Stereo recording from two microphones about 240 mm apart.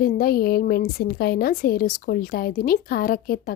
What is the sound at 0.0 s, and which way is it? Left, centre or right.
A woman's voice, left.